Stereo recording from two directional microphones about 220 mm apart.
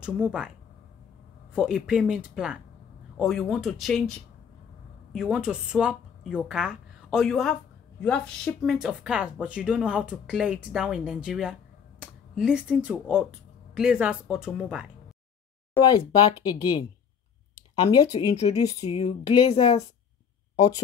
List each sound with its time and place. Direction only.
0.0 s speech: 5° right (ahead or behind)
1.5 s speech: 5° right (ahead or behind)
5.1 s speech: 5° right (ahead or behind)
15.8 s speech: 20° left (ahead or behind)
17.6 s a sound: 20° left (ahead or behind)
18.3 s speech: 30° left (ahead or behind)